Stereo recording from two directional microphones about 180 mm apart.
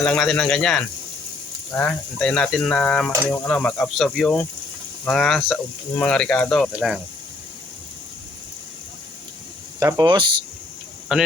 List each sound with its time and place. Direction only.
0.0 s speech: 5° left (ahead or behind)
9.8 s speech: 25° right (ahead or behind)
11.1 s speech: 5° right (ahead or behind)